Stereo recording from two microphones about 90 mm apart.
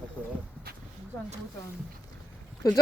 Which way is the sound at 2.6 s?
40° left (ahead or behind).